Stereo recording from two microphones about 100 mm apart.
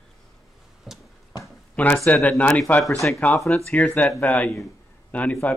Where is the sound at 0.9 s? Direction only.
Centre (ahead or behind).